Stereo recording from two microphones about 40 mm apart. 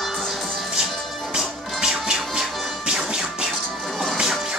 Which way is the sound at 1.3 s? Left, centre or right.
Centre.